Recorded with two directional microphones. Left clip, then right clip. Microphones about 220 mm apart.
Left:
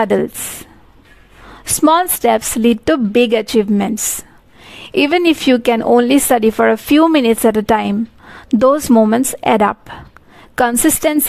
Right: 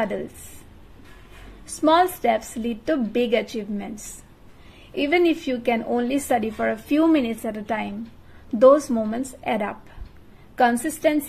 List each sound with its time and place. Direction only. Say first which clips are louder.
0.0 s speech: left 12 dB; 45° left (ahead or behind)
1.8 s speech: left 6 dB; 45° left (ahead or behind)